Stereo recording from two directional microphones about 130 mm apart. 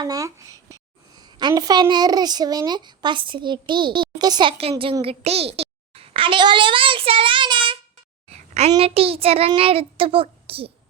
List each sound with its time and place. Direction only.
0.0 s a child's voice: 25° right (ahead or behind)
8.3 s a sound: 55° right (ahead or behind)
8.8 s a child's voice: 50° right (ahead or behind)